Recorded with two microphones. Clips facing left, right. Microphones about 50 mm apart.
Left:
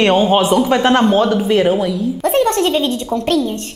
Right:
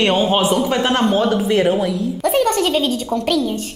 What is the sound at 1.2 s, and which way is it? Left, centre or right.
A woman's voice, centre.